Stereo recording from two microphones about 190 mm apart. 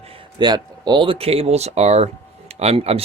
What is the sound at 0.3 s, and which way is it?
A man's voice, 20° right (ahead or behind).